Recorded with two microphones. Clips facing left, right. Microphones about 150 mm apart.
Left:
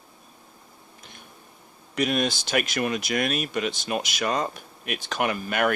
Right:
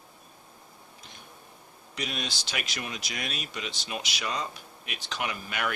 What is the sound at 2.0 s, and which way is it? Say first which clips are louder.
Speech: left 11 dB; 55° left (ahead or behind).